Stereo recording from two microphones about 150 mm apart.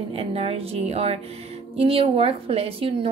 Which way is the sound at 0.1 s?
40° right (ahead or behind).